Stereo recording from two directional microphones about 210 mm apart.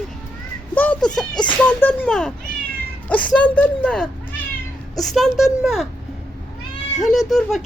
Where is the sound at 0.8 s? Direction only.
5° left (ahead or behind).